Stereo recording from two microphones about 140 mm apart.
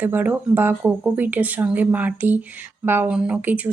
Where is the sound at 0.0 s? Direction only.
15° right (ahead or behind).